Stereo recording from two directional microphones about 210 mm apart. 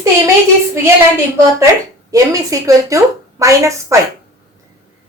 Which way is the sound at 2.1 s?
15° right (ahead or behind).